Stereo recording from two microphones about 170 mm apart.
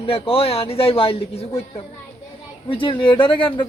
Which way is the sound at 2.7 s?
30° left (ahead or behind).